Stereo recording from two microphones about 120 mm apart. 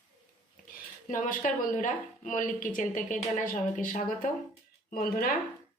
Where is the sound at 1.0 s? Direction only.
90° left.